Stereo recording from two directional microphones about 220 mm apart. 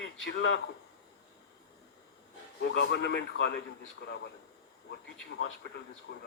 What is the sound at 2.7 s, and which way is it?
Speech, 50° left (ahead or behind).